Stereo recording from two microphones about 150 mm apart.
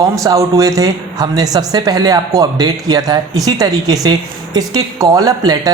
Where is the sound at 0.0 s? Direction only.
20° right (ahead or behind).